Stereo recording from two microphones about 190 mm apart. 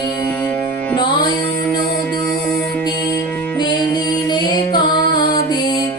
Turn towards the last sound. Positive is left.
turn(degrees=25)  # may be behind; listen again after turning